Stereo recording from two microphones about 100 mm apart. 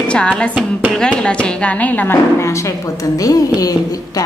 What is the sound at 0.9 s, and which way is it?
A woman's voice, 10° left (ahead or behind).